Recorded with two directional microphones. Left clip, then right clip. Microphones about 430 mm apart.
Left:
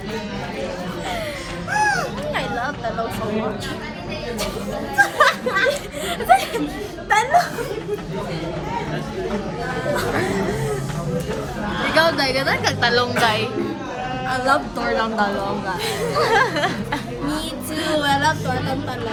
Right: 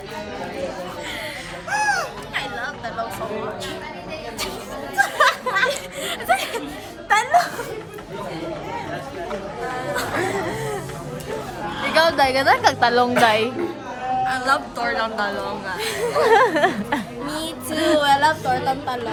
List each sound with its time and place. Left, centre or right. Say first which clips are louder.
1.7 s music: left 1 dB; centre
4.9 s a sound: left 2 dB; centre
6.1 s chuckle: left 5 dB; centre
7.1 s speech: left 1 dB; centre
11.9 s speech: even; centre
12.6 s music: right 2 dB; centre
14.3 s a woman's voice: left 5 dB; centre
15.8 s chatter: right 2 dB; centre